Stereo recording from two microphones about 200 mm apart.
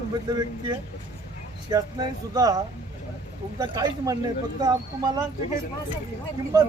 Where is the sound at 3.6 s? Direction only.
20° right (ahead or behind).